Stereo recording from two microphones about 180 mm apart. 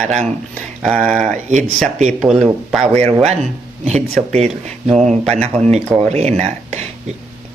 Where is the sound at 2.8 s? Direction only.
35° right (ahead or behind).